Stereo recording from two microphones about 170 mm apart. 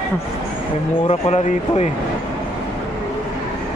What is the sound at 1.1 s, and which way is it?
Speech, 40° left (ahead or behind).